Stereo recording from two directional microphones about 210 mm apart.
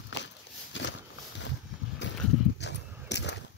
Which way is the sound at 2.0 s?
55° left (ahead or behind).